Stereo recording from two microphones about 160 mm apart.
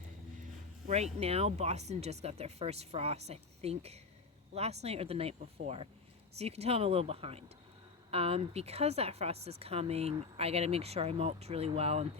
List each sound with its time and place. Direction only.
0.9 s speech: 40° right (ahead or behind)